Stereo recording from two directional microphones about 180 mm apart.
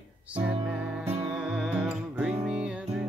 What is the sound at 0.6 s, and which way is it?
Music, 5° right (ahead or behind).